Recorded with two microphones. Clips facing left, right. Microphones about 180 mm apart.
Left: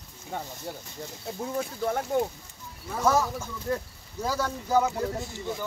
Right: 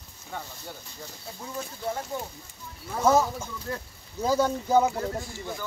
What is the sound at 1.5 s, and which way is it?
Speech, 55° left (ahead or behind).